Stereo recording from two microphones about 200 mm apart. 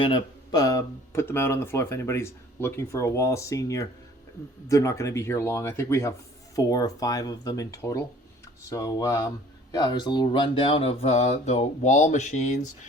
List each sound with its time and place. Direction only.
0.0 s speech: 20° left (ahead or behind); by 12.5 s 35° left (ahead or behind)